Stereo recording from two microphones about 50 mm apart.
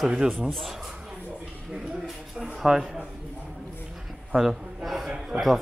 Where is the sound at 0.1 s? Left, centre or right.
Centre.